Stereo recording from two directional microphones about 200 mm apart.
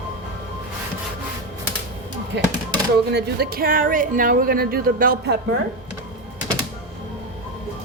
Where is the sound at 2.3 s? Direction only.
60° right (ahead or behind).